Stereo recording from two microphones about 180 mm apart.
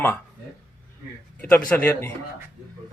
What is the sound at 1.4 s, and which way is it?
Speech, 10° left (ahead or behind).